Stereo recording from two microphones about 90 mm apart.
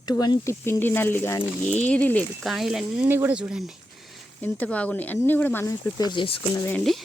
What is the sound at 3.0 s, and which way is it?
Speech, 25° right (ahead or behind).